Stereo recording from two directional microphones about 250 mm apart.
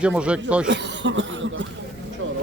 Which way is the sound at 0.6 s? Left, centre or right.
Right.